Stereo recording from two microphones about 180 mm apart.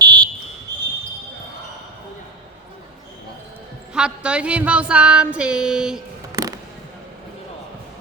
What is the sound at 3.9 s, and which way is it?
Music, 5° right (ahead or behind).